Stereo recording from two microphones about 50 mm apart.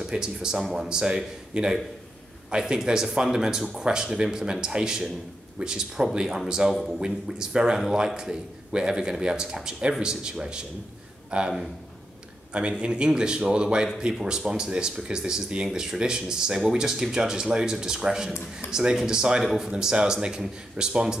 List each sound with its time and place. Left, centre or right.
0.0 s speech: centre
6.7 s a man's voice: centre
7.1 s a man's voice: centre
12.5 s a man's voice: centre